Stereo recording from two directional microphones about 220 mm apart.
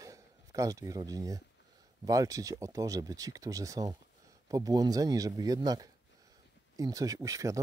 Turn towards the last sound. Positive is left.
turn(degrees=-15)  # may be behind; listen again after turning